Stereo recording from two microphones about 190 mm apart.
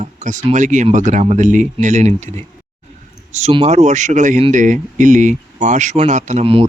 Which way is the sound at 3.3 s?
35° right (ahead or behind).